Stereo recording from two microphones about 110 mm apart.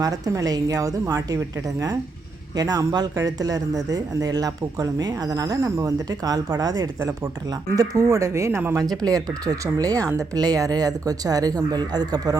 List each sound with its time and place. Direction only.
0.0 s speech: 35° right (ahead or behind)